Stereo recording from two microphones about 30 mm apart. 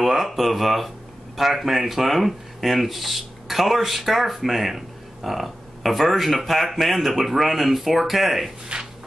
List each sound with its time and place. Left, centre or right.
0.0 s speech: centre
0.4 s speech: centre
8.7 s speech: right